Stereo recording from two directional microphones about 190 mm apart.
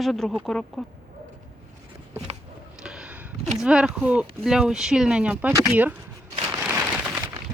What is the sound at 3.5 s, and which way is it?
Speech, 5° right (ahead or behind).